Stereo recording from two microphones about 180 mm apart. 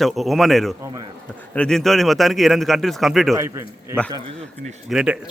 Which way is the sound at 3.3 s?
15° right (ahead or behind).